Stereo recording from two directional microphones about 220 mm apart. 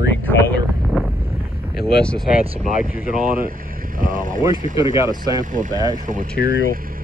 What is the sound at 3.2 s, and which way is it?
Speech, 40° right (ahead or behind).